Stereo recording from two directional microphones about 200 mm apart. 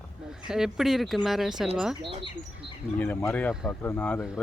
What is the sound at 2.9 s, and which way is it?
Speech, 10° left (ahead or behind).